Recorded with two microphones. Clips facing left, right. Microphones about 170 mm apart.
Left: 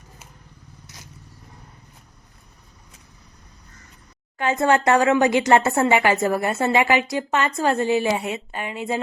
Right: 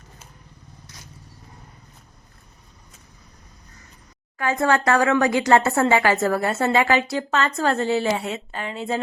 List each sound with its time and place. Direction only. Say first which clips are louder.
4.4 s a woman's voice: left 1 dB; 20° left (ahead or behind)